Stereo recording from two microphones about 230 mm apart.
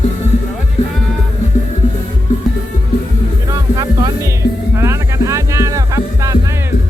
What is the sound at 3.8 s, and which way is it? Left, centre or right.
Music, centre.